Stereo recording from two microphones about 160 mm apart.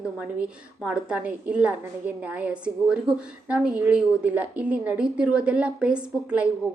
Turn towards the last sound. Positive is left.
turn(degrees=-5)  # may be behind; listen again after turning